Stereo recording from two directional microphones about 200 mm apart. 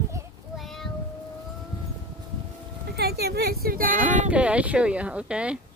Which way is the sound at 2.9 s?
55° right (ahead or behind).